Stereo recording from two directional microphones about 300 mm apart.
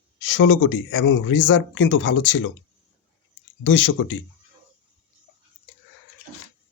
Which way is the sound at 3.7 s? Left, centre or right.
Left.